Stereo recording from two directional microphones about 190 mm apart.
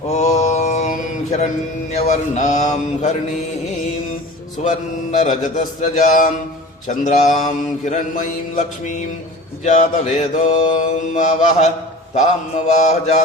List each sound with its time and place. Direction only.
0.1 s mantra: 35° left (ahead or behind)
5.2 s mantra: 40° left (ahead or behind)